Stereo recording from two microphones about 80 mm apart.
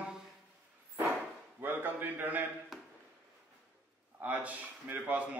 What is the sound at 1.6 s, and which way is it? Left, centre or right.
Speech, right.